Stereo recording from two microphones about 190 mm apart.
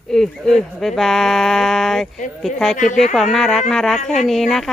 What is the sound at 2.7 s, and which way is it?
Speech, 40° left (ahead or behind).